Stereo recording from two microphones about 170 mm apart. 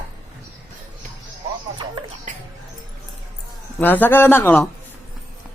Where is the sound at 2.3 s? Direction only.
45° right (ahead or behind).